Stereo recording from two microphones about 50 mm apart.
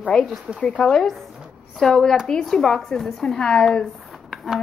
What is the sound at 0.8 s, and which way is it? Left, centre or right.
Speech, centre.